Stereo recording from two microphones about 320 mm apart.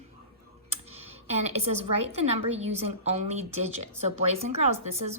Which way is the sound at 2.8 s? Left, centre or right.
Centre.